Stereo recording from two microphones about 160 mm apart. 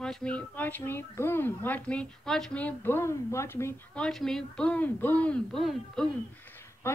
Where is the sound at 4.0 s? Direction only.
5° left (ahead or behind).